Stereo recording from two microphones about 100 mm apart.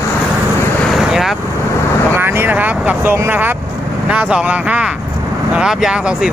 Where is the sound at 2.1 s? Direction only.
20° right (ahead or behind).